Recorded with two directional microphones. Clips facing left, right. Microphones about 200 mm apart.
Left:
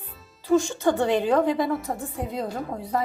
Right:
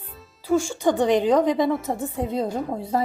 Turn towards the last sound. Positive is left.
turn(degrees=-25)  # may be behind; listen again after turning